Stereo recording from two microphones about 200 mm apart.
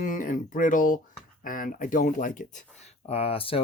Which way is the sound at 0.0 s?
40° left (ahead or behind).